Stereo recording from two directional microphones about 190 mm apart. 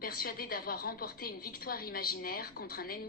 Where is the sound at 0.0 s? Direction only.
50° left (ahead or behind).